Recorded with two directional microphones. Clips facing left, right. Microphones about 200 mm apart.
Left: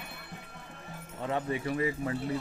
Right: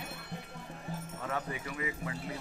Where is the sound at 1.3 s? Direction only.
25° left (ahead or behind).